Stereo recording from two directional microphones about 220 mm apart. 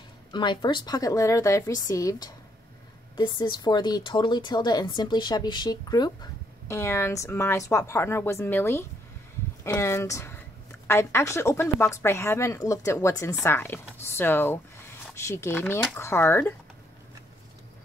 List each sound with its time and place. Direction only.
0.3 s speech: 20° left (ahead or behind)